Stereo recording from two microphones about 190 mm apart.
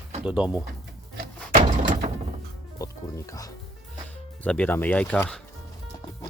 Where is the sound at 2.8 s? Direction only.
15° left (ahead or behind).